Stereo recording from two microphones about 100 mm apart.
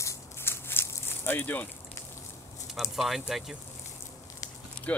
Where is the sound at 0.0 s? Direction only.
25° left (ahead or behind).